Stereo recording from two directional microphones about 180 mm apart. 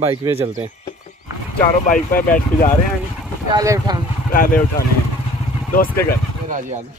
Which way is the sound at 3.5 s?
20° right (ahead or behind).